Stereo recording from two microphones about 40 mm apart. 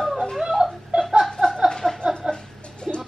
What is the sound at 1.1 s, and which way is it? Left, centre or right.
Laughter, centre.